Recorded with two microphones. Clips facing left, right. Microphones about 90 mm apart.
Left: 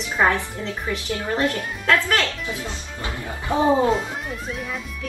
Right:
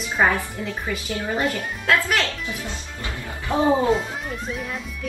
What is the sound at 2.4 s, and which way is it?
Speech, 20° left (ahead or behind).